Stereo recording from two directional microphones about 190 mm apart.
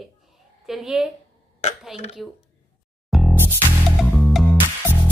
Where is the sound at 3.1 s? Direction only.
Centre (ahead or behind).